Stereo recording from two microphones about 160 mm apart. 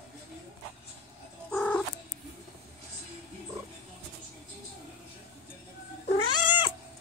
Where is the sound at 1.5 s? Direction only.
10° left (ahead or behind).